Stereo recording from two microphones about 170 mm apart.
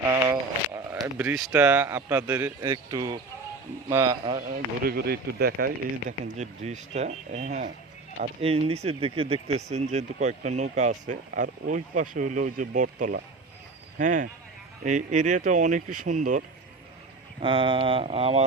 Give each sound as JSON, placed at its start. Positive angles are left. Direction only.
{"t": 0.0, "sound": "a sound", "side_deg": -15}
{"t": 1.2, "sound": "speech", "side_deg": -10}
{"t": 4.8, "sound": "speech", "side_deg": -65}
{"t": 8.4, "sound": "speech", "side_deg": -35}
{"t": 17.4, "sound": "speech", "side_deg": -30}